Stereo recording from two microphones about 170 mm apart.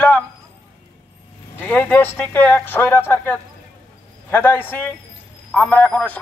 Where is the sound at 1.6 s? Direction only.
10° left (ahead or behind).